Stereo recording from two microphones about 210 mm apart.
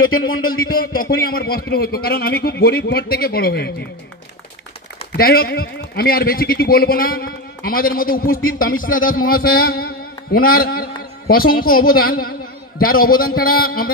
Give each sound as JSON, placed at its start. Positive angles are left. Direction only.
{"t": 0.0, "sound": "speech", "side_deg": 75}
{"t": 0.7, "sound": "a man's voice", "side_deg": 45}
{"t": 5.1, "sound": "a man's voice", "side_deg": 45}
{"t": 9.7, "sound": "a sound", "side_deg": 45}
{"t": 10.6, "sound": "a man's voice", "side_deg": 45}